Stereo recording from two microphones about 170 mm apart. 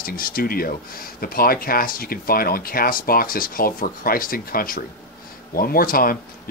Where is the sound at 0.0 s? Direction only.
60° left (ahead or behind).